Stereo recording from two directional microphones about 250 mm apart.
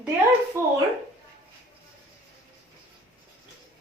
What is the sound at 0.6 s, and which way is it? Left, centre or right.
Speech, centre.